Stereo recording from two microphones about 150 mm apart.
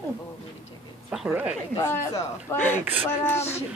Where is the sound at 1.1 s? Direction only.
5° right (ahead or behind).